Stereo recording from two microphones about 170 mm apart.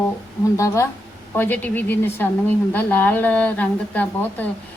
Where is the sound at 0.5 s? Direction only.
15° left (ahead or behind).